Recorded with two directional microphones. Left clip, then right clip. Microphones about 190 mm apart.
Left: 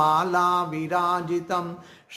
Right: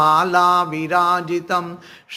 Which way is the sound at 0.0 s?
15° right (ahead or behind).